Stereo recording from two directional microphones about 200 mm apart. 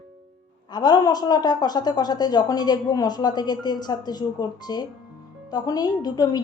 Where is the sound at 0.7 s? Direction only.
20° left (ahead or behind).